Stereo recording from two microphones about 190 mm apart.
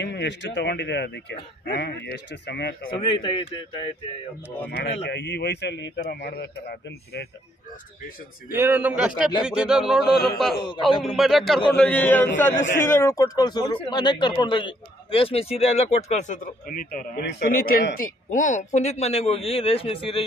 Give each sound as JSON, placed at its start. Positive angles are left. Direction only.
{"t": 0.0, "sound": "speech", "side_deg": 65}
{"t": 3.0, "sound": "speech", "side_deg": 25}
{"t": 4.6, "sound": "speech", "side_deg": 60}
{"t": 8.5, "sound": "a man's voice", "side_deg": -10}